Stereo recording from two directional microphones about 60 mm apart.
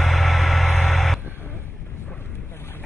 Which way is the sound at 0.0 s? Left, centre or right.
Centre.